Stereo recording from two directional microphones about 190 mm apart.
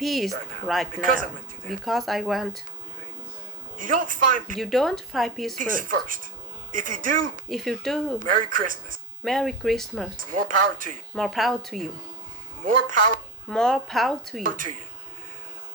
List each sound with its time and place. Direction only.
0.0 s speech: centre (ahead or behind)
1.0 s speech: 45° right (ahead or behind)
1.8 s speech: centre (ahead or behind)
3.8 s speech: 45° right (ahead or behind)
4.5 s speech: centre (ahead or behind)
5.5 s speech: 45° right (ahead or behind)
7.4 s speech: centre (ahead or behind)
8.2 s speech: 45° right (ahead or behind)
9.2 s speech: centre (ahead or behind)
10.2 s speech: 45° right (ahead or behind)
11.1 s speech: centre (ahead or behind)
13.5 s speech: 5° left (ahead or behind)
14.4 s speech: 45° right (ahead or behind)